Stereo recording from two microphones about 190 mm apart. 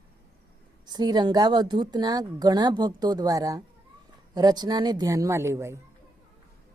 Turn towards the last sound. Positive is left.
turn(degrees=-15)  # may be behind; listen again after turning